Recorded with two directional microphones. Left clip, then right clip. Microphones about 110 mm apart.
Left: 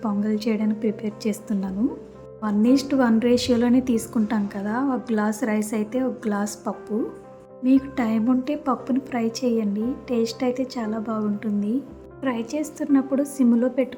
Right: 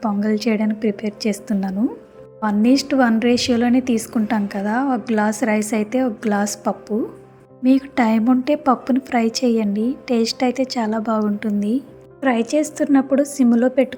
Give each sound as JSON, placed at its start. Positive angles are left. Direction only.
{"t": 0.0, "sound": "a woman's voice", "side_deg": -35}
{"t": 7.6, "sound": "a woman's voice", "side_deg": -50}